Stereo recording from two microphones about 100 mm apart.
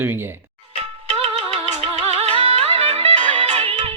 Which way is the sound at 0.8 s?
90° right.